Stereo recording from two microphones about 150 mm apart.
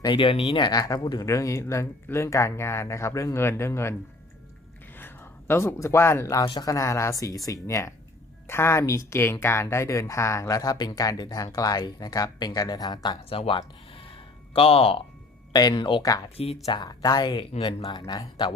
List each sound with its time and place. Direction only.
0.0 s speech: 35° left (ahead or behind); by 3.9 s 20° left (ahead or behind)
4.9 s speech: 15° left (ahead or behind)
6.4 s speech: 30° left (ahead or behind)
13.4 s a sound: 35° left (ahead or behind)
15.5 s speech: 30° left (ahead or behind)